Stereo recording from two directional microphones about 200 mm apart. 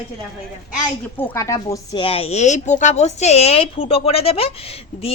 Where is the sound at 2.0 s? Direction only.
30° left (ahead or behind).